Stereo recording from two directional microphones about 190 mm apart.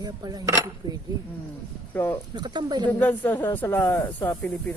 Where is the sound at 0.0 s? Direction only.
20° right (ahead or behind).